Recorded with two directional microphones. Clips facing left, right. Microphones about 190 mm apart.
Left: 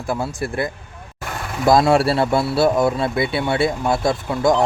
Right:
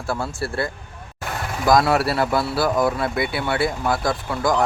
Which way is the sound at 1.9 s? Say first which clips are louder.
Left 3 dB; 25° left (ahead or behind).